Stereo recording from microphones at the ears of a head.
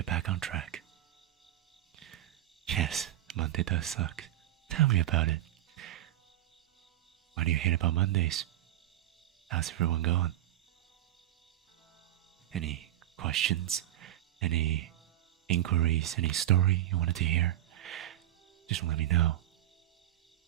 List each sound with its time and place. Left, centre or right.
0.0 s speech: right
2.6 s speech: right
4.7 s music: right
7.3 s speech: right
9.5 s speech: right
12.5 s speech: right